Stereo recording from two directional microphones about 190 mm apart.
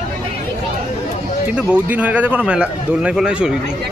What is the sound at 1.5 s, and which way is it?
A man's voice, 5° right (ahead or behind).